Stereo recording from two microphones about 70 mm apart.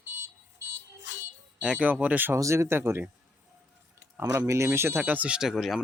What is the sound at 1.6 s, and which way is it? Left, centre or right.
Speech, right.